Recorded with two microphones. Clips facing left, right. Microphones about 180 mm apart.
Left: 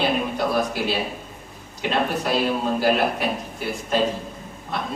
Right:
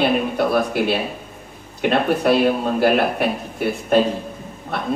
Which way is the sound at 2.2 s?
60° right (ahead or behind).